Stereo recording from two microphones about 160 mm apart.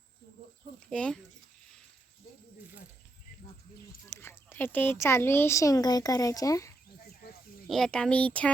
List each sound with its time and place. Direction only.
0.9 s speech: 5° left (ahead or behind)
4.1 s speech: 15° left (ahead or behind)
7.0 s a sound: 70° left (ahead or behind)
7.7 s speech: 5° left (ahead or behind)